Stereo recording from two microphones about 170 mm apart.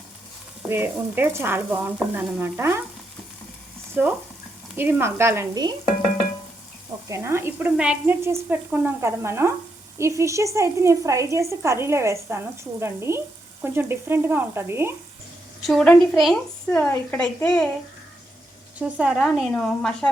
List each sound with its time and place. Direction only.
0.7 s speech: 10° right (ahead or behind)
4.0 s speech: 10° right (ahead or behind)
7.1 s speech: 15° right (ahead or behind)
15.6 s a woman's voice: 5° left (ahead or behind)
18.8 s a woman's voice: 10° right (ahead or behind)